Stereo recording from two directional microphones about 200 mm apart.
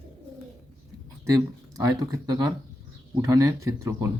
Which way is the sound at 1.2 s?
15° right (ahead or behind).